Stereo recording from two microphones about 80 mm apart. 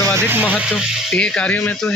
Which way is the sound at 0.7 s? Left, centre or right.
Centre.